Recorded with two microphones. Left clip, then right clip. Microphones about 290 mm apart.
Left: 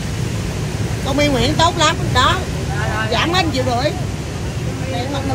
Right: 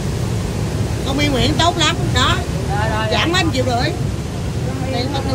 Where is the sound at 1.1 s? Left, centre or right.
Left.